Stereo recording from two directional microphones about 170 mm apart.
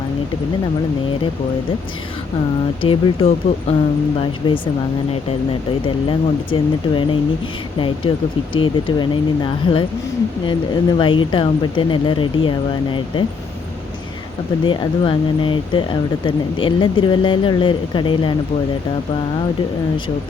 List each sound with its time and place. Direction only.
2.8 s speech: 30° left (ahead or behind)
5.8 s speech: 30° left (ahead or behind)
14.6 s speech: 30° left (ahead or behind)